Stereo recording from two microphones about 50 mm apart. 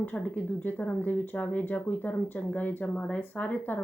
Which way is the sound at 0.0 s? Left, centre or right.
Left.